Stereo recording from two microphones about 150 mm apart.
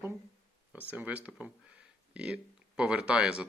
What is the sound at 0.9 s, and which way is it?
Speech, 10° right (ahead or behind).